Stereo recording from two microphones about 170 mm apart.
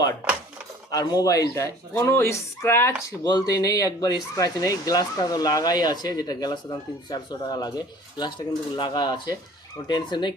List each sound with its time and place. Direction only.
0.9 s speech: 20° left (ahead or behind)